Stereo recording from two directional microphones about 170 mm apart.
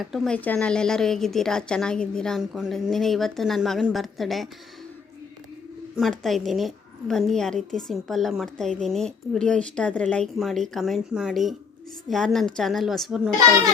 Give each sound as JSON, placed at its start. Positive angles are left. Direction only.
{"t": 0.0, "sound": "a woman's voice", "side_deg": 0}
{"t": 6.0, "sound": "a woman's voice", "side_deg": 0}